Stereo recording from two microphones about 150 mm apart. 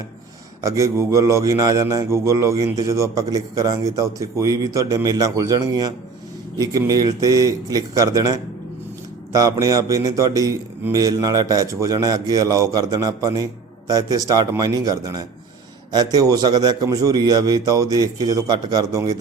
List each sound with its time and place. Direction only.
0.6 s a man's voice: 20° right (ahead or behind)